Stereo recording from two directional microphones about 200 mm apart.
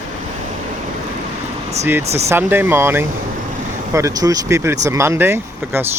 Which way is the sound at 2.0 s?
30° right (ahead or behind).